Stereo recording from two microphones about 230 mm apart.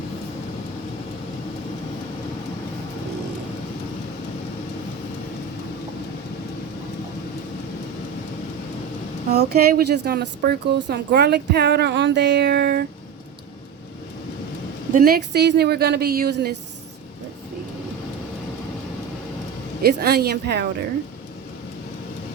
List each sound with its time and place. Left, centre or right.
9.3 s speech: right
14.9 s speech: right
19.8 s speech: right